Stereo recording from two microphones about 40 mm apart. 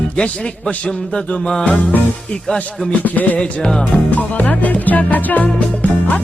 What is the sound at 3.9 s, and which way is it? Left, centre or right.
Music, left.